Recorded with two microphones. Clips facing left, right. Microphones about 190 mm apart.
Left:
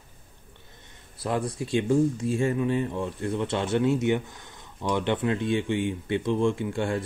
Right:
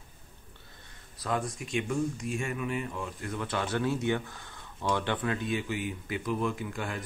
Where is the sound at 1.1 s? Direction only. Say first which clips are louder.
Left 4 dB; 30° left (ahead or behind).